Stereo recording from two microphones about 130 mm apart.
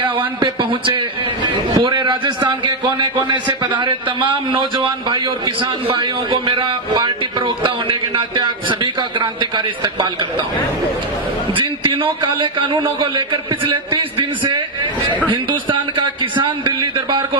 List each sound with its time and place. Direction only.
0.3 s a man's voice: 40° right (ahead or behind)
11.5 s a man's voice: 40° right (ahead or behind)
15.7 s a man's voice: 40° right (ahead or behind)